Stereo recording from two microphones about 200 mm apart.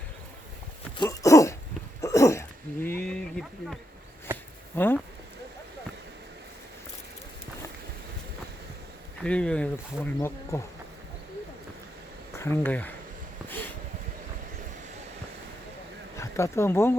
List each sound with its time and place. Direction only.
0.9 s dog: 15° left (ahead or behind)
2.0 s throat clearing: 15° left (ahead or behind)
4.3 s a sound: 10° right (ahead or behind)
4.8 s speech: 10° left (ahead or behind)
9.2 s a sound: 5° left (ahead or behind)
10.2 s speech: 15° left (ahead or behind)
12.4 s speech: 10° left (ahead or behind)
16.1 s speech: 15° left (ahead or behind)